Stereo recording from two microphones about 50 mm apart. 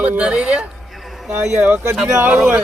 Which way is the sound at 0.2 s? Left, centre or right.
Centre.